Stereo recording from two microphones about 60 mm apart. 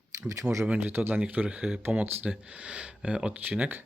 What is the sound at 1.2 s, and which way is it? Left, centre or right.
Speech, right.